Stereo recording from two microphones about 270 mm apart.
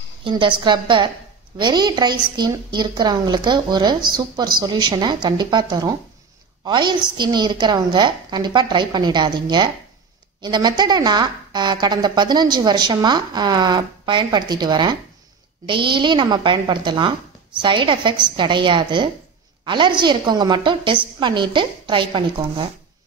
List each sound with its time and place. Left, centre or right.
0.2 s a woman's voice: centre